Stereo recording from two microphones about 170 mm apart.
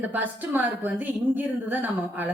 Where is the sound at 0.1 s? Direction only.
10° right (ahead or behind).